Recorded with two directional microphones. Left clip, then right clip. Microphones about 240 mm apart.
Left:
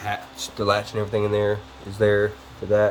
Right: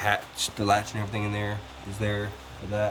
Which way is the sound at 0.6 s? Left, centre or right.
Centre.